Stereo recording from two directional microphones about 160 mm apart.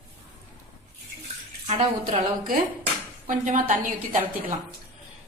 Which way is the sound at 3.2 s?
50° right (ahead or behind).